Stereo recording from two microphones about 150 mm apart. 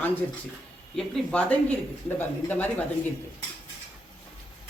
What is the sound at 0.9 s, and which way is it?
Speech, 5° left (ahead or behind).